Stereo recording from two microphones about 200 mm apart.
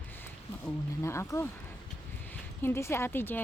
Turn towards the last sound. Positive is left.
turn(degrees=10)  # may be behind; listen again after turning